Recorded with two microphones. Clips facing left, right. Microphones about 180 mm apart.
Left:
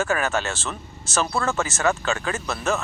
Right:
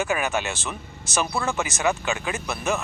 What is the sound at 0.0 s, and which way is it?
Speech, 15° right (ahead or behind).